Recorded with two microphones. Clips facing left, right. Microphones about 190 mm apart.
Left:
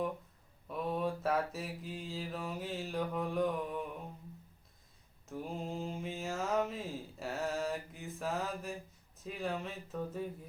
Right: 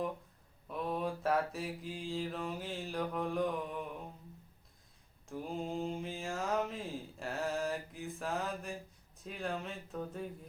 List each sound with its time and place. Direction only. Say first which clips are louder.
0.7 s mantra: left 1 dB; centre (ahead or behind)
5.3 s mantra: right 1 dB; centre (ahead or behind)
9.1 s speech: left 1 dB; centre (ahead or behind)